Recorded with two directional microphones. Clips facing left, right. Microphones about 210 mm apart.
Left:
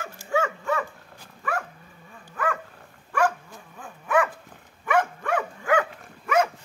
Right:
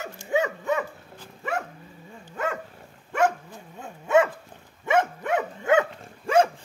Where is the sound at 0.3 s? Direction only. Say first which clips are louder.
Right 1 dB; 20° right (ahead or behind).